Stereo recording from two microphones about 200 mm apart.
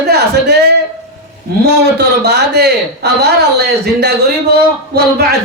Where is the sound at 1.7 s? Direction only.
55° right (ahead or behind).